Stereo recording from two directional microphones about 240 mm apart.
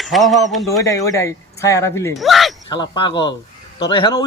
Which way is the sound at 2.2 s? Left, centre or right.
Centre.